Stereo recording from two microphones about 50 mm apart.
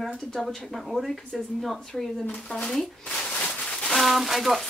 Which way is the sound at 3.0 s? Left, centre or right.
Centre.